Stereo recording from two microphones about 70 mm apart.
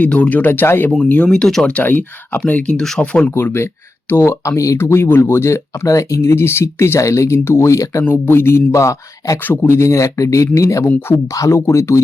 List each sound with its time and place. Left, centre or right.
0.0 s speech: centre
1.3 s speech: centre
1.6 s speech: left
2.8 s speech: centre
3.1 s speech: centre
3.3 s speech: left
8.0 s speech: left
9.4 s speech: left